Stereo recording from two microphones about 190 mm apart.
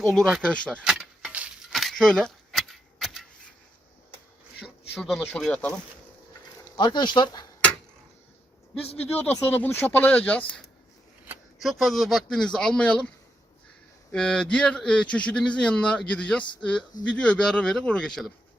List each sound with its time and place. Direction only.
0.0 s keys jangling: centre (ahead or behind)
4.6 s speech: centre (ahead or behind)
6.7 s speech: 25° left (ahead or behind)
9.0 s a man's voice: 10° left (ahead or behind)
14.1 s a man's voice: 5° left (ahead or behind)